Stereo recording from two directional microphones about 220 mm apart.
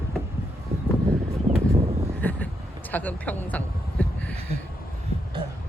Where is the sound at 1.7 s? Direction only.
25° right (ahead or behind).